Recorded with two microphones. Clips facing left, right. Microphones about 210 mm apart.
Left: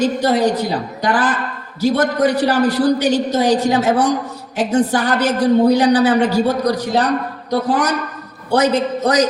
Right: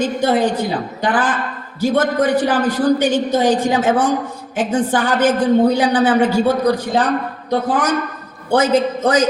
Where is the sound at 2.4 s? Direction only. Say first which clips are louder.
Even; 50° right (ahead or behind).